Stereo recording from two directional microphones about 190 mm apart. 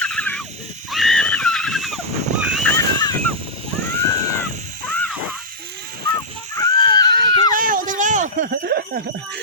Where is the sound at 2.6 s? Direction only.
10° left (ahead or behind).